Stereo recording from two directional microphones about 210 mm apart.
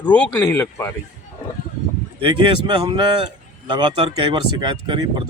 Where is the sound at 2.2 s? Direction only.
25° right (ahead or behind).